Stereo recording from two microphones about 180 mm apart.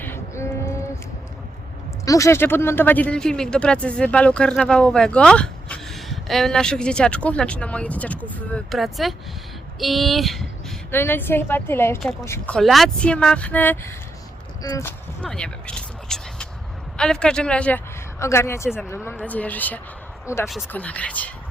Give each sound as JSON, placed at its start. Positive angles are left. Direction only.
{"t": 0.0, "sound": "a sound", "side_deg": 15}
{"t": 2.0, "sound": "speech", "side_deg": 15}
{"t": 10.9, "sound": "a woman's voice", "side_deg": 10}
{"t": 15.2, "sound": "a woman's voice", "side_deg": 5}